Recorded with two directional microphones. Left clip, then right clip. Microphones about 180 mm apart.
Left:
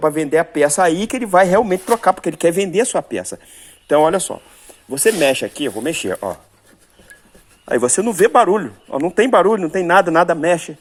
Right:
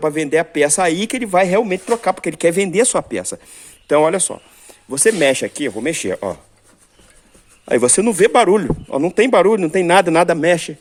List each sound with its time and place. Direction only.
0.0 s speech: 10° right (ahead or behind)
7.7 s a man's voice: 40° right (ahead or behind)
8.9 s speech: 30° right (ahead or behind)
9.6 s a man's voice: 30° right (ahead or behind)